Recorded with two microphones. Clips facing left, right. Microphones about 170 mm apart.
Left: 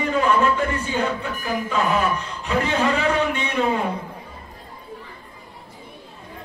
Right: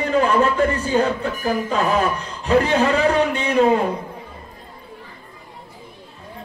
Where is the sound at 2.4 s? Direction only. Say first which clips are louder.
Right 5 dB; 35° right (ahead or behind).